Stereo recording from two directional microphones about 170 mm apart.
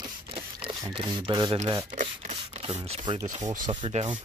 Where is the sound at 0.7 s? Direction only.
30° right (ahead or behind).